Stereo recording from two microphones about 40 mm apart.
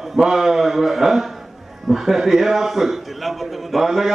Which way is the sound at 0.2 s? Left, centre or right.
Centre.